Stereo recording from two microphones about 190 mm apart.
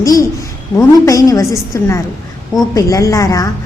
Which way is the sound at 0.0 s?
20° left (ahead or behind).